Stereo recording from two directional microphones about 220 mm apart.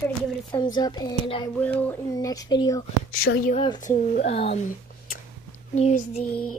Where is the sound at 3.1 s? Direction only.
40° left (ahead or behind).